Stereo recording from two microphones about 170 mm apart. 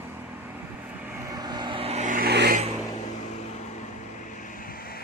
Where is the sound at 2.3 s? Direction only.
75° right (ahead or behind).